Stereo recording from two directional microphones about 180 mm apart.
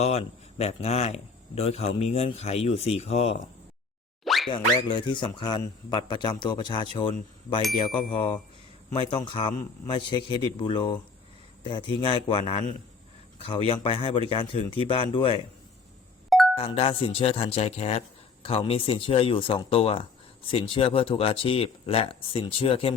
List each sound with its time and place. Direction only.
0.0 s speech: 35° left (ahead or behind)
4.2 s plop: centre (ahead or behind)
4.4 s a man's voice: 25° left (ahead or behind)
16.6 s speech: 30° left (ahead or behind)